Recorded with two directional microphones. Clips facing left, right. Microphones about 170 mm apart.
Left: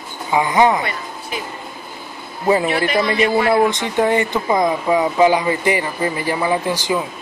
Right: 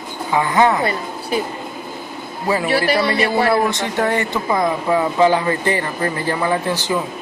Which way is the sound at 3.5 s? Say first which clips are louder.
Left 2 dB; 20° left (ahead or behind).